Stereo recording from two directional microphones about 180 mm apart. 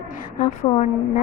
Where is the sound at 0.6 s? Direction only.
30° left (ahead or behind).